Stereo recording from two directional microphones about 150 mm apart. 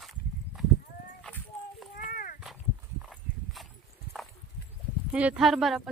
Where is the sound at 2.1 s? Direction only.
70° left (ahead or behind).